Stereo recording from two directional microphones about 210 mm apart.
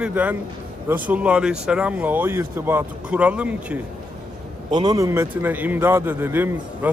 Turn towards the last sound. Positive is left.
turn(degrees=-10)  # may be behind; listen again after turning